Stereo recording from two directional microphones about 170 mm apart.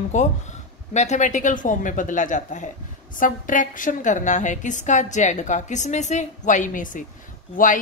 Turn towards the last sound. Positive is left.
turn(degrees=50)  # may be behind; listen again after turning